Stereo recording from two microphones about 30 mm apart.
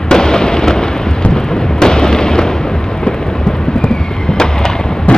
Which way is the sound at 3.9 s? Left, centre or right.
Left.